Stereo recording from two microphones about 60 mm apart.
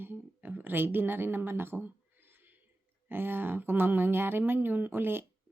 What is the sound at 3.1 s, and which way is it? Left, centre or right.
Speech, right.